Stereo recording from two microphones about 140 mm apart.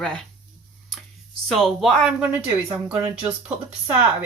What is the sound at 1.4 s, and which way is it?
Speech, centre (ahead or behind).